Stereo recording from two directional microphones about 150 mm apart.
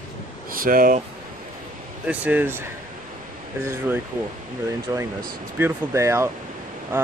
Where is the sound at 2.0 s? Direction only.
10° right (ahead or behind).